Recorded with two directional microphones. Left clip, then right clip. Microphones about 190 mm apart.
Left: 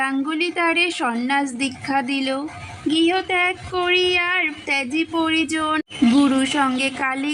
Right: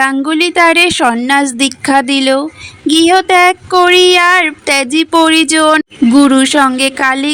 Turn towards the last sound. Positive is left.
turn(degrees=-40)  # may be behind; listen again after turning